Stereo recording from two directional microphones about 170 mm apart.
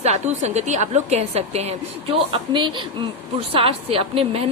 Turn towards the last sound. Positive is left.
turn(degrees=-35)  # may be behind; listen again after turning